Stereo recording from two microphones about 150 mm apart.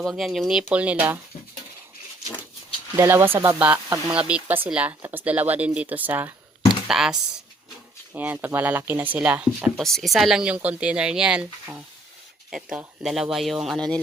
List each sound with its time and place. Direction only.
0.0 s speech: centre (ahead or behind)
2.9 s speech: 15° right (ahead or behind)
4.1 s speech: 10° right (ahead or behind)